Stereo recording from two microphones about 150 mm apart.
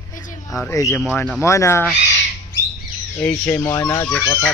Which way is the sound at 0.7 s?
20° left (ahead or behind).